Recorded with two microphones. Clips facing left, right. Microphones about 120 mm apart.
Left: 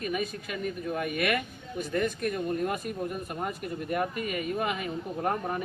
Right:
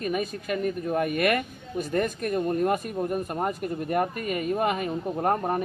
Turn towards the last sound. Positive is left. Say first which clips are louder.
# right 5 dB
turn(degrees=-45)  # may be behind; listen again after turning